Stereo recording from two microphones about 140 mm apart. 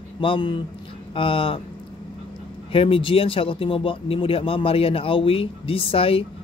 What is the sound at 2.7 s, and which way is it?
A man's voice, 40° left (ahead or behind).